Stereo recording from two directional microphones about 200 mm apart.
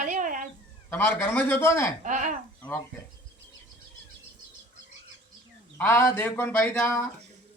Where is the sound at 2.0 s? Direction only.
40° right (ahead or behind).